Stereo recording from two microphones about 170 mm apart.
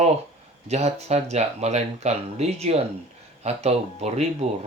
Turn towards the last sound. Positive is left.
turn(degrees=-40)  # may be behind; listen again after turning